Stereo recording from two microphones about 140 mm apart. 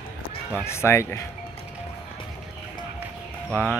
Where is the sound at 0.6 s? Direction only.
20° left (ahead or behind).